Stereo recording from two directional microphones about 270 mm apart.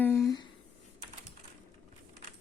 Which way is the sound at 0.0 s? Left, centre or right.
Centre.